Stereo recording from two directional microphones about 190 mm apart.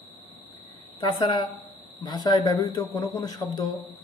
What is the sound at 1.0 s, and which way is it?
Speech, 25° left (ahead or behind).